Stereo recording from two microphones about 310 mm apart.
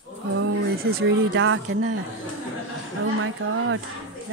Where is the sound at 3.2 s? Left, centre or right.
Right.